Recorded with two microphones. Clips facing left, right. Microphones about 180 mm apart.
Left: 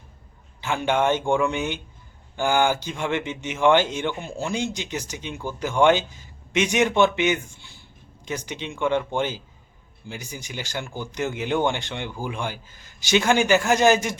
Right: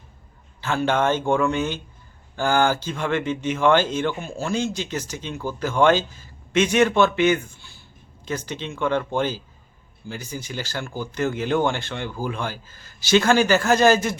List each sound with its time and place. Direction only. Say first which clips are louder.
0.6 s speech: right 1 dB; 15° left (ahead or behind)